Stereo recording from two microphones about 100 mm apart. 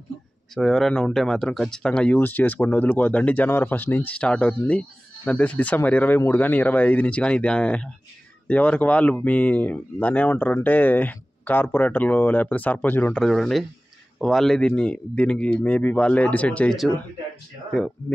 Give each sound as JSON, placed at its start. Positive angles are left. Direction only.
{"t": 0.6, "sound": "speech", "side_deg": 5}
{"t": 13.2, "sound": "speech", "side_deg": 0}